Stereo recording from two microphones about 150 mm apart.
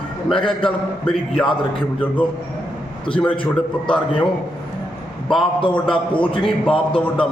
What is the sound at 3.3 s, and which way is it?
Speech, 35° left (ahead or behind).